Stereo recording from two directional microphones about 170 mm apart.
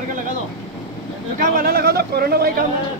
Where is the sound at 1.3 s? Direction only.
55° right (ahead or behind).